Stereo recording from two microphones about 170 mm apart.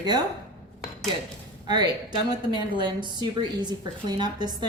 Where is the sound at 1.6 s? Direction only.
25° right (ahead or behind).